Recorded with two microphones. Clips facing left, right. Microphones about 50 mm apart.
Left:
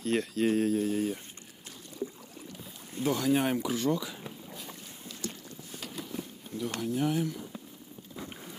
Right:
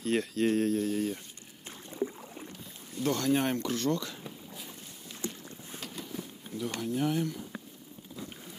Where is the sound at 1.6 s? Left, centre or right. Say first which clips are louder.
Right 4 dB; right.